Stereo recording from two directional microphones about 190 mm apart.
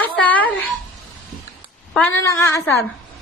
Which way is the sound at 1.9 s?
10° left (ahead or behind).